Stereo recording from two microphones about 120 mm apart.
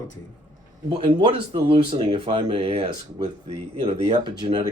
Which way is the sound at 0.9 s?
45° right (ahead or behind).